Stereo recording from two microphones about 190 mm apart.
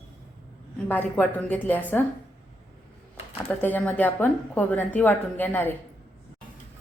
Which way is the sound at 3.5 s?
10° left (ahead or behind).